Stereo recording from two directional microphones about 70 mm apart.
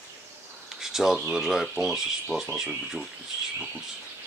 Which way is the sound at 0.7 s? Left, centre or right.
Centre.